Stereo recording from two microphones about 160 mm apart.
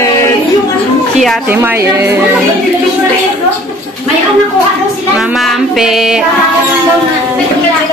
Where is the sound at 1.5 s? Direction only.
15° right (ahead or behind).